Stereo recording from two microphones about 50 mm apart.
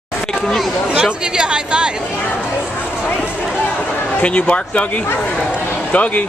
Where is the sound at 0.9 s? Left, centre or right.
Centre.